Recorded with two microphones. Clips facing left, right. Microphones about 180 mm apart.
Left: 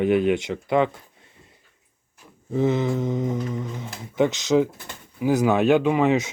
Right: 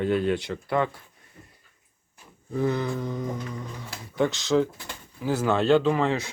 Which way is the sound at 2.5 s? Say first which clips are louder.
Left 4 dB; 20° left (ahead or behind).